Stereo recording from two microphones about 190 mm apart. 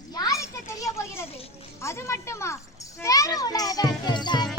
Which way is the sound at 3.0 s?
15° left (ahead or behind).